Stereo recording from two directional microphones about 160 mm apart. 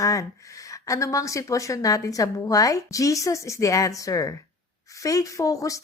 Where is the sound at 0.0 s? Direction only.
20° left (ahead or behind).